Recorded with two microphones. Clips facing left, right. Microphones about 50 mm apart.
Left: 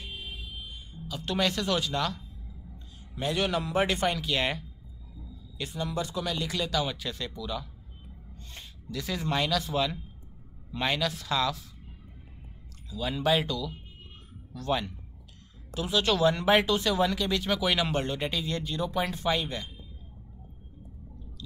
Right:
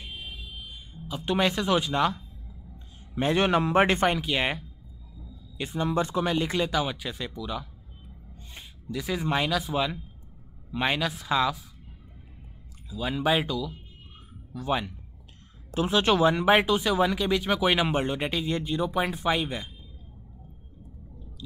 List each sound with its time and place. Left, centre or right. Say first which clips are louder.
0.2 s a sound: even; centre
1.0 s speech: right 3 dB; right
12.9 s speech: right 1 dB; centre
15.7 s speech: right 4 dB; right